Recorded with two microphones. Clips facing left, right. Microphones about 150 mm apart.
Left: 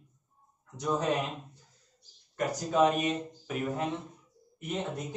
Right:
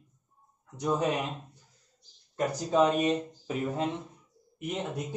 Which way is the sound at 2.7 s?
30° right (ahead or behind).